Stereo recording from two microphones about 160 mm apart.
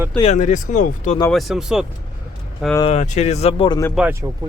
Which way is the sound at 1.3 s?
Centre (ahead or behind).